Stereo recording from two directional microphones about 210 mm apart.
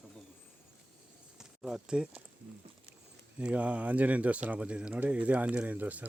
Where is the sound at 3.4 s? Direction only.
5° right (ahead or behind).